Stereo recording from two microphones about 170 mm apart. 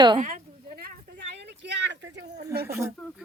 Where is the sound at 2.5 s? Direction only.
70° right (ahead or behind).